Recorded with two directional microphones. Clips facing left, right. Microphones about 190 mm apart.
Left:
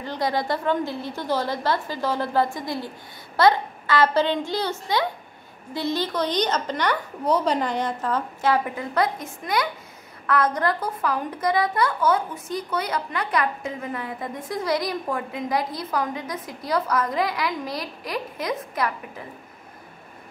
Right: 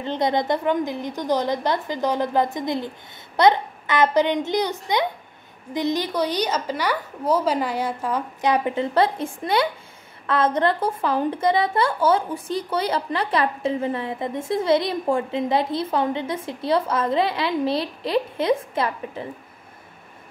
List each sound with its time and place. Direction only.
0.0 s a woman's voice: 20° right (ahead or behind)